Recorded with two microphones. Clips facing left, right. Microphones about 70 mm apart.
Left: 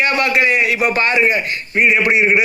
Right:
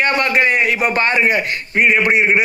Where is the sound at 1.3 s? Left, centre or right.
Right.